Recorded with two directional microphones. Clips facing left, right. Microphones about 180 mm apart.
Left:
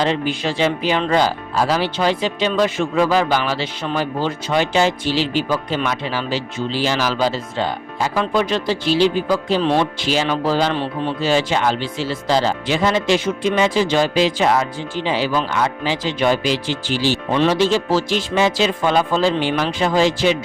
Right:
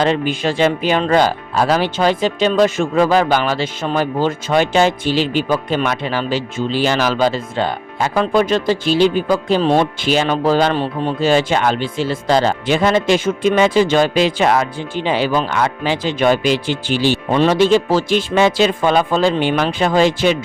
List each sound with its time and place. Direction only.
0.0 s speech: 50° right (ahead or behind)